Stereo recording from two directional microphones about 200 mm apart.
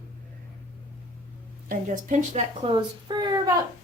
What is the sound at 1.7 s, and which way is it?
Speech, 40° right (ahead or behind).